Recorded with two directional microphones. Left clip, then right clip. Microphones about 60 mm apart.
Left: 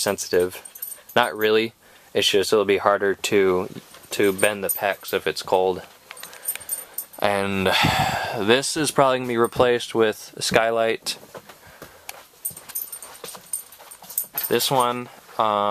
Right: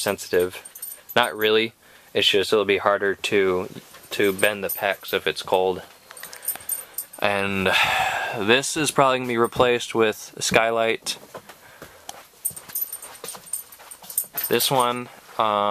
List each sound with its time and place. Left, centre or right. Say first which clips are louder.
0.0 s speech: left 1 dB; left
4.6 s speech: even; left
6.4 s chicken: left 1 dB; left
8.6 s speech: even; centre
14.5 s speech: even; centre
15.3 s speech: even; left